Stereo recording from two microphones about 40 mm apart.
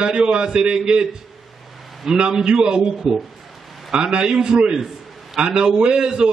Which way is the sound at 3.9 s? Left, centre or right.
Right.